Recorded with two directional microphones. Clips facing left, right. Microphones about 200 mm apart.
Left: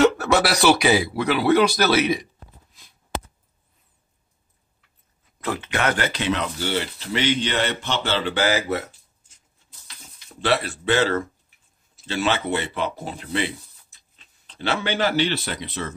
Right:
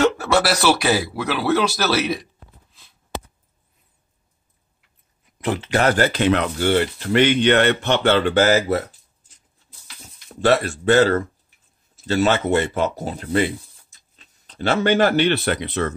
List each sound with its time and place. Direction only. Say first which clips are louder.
0.5 s speech: even; centre (ahead or behind)
5.4 s speech: right 5 dB; 25° right (ahead or behind)
10.4 s speech: right 5 dB; 45° right (ahead or behind); by 15.9 s 65° right (ahead or behind)